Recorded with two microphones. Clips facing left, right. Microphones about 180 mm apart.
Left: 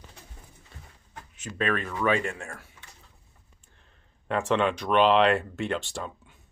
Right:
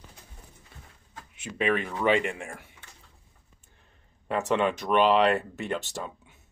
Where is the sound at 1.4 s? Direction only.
15° right (ahead or behind).